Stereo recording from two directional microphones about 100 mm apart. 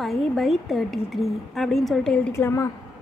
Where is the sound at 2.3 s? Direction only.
25° left (ahead or behind).